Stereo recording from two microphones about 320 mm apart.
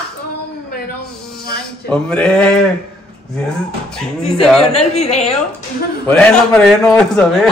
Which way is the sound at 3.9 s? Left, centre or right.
Centre.